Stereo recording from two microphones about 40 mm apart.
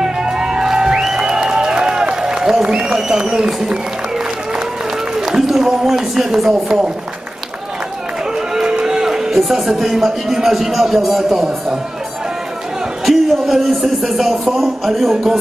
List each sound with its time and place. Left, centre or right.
0.0 s music: centre
5.2 s speech: centre
8.5 s music: centre
9.4 s a man's voice: centre
13.0 s a man's voice: centre